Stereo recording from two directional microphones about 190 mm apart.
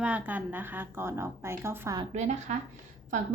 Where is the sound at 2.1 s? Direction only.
35° right (ahead or behind).